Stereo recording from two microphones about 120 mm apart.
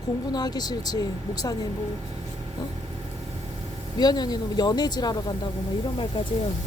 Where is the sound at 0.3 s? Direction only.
35° left (ahead or behind).